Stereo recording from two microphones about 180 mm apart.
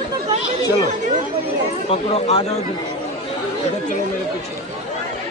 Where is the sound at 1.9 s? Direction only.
35° left (ahead or behind).